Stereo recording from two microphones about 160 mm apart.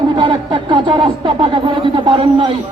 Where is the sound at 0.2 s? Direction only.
30° right (ahead or behind).